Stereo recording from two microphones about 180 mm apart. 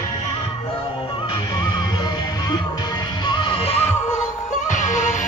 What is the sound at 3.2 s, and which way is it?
Music, 25° left (ahead or behind).